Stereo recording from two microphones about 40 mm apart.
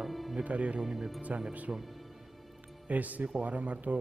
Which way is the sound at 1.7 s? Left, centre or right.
Right.